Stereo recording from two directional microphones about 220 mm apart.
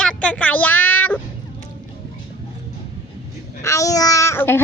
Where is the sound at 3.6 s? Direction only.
15° left (ahead or behind).